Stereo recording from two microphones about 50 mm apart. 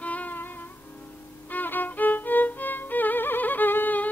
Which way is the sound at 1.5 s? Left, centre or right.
Left.